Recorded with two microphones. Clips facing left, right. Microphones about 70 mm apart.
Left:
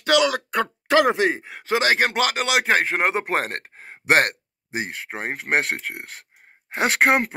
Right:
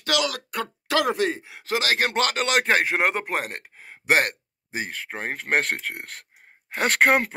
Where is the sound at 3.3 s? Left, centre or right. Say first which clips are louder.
Left 4 dB; left.